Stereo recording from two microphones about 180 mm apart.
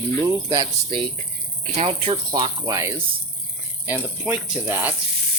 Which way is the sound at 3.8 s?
10° right (ahead or behind).